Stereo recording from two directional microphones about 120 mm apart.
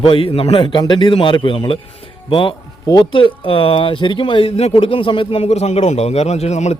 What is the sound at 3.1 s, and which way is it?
Speech, 45° left (ahead or behind).